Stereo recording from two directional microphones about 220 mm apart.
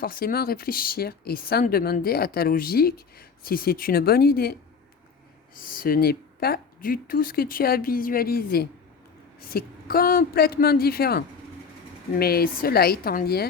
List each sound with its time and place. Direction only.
0.0 s speech: 40° left (ahead or behind)
5.5 s speech: 40° left (ahead or behind)
12.2 s speech: 45° left (ahead or behind)